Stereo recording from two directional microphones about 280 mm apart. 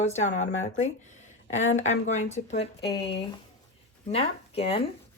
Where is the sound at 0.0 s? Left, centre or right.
Left.